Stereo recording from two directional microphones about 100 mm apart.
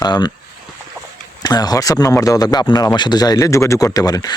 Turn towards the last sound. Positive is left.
turn(degrees=35)  # may be behind; listen again after turning